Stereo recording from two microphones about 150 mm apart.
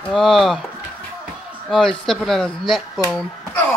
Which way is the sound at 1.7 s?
Centre (ahead or behind).